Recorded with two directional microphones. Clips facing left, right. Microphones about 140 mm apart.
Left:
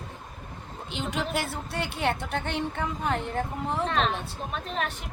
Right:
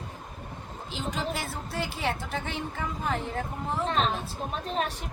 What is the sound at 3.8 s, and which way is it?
A woman's voice, 35° right (ahead or behind).